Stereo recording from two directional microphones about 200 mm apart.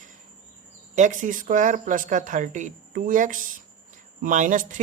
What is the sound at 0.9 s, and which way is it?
Speech, 40° right (ahead or behind).